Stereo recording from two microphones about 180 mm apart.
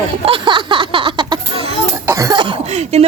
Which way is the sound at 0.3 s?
30° right (ahead or behind).